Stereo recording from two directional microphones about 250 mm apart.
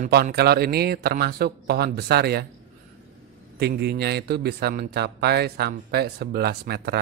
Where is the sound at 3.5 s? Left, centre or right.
Right.